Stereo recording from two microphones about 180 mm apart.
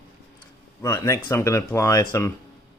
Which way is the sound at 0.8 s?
15° left (ahead or behind).